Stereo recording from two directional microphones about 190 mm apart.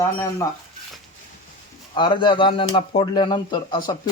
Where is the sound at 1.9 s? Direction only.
25° left (ahead or behind).